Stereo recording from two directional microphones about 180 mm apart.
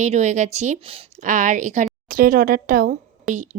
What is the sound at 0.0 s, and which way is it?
A woman's voice, 40° right (ahead or behind).